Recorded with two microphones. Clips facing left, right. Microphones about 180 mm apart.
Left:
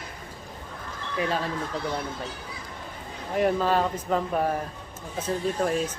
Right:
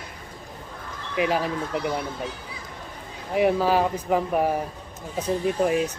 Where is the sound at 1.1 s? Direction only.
15° right (ahead or behind).